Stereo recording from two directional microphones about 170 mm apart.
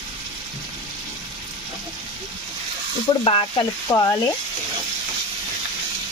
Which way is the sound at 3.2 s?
35° left (ahead or behind).